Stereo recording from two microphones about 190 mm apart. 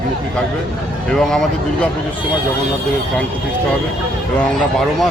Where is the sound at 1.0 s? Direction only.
Centre (ahead or behind).